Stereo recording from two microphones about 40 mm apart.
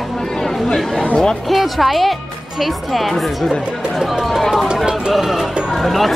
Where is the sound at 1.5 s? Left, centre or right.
Centre.